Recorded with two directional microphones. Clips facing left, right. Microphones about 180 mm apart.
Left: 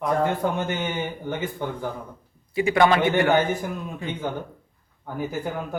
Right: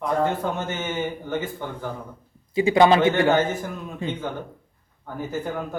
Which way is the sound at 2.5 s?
20° right (ahead or behind).